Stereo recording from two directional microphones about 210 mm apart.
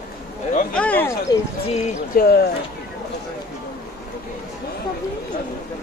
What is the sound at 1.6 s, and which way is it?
Speech, 30° left (ahead or behind).